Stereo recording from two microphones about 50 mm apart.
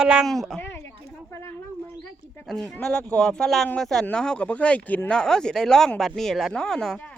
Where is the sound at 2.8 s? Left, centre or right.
Centre.